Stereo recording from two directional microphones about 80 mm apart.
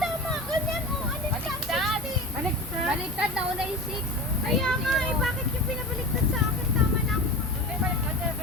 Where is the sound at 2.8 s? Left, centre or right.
Centre.